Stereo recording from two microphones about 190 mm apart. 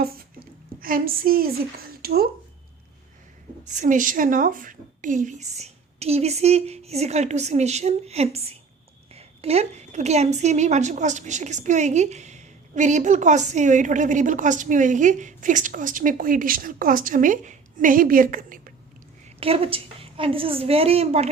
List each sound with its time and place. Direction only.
0.8 s a woman's voice: 50° right (ahead or behind)
1.9 s a sound: 55° right (ahead or behind)
3.7 s a woman's voice: 40° right (ahead or behind)
19.4 s a woman's voice: 30° right (ahead or behind)